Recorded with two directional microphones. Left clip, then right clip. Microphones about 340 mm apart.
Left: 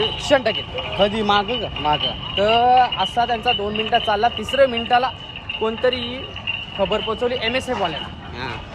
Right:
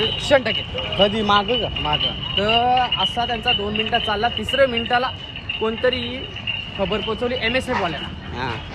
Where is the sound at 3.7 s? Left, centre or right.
Centre.